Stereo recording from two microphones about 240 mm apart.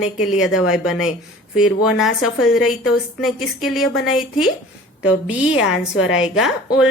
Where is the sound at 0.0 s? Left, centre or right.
Centre.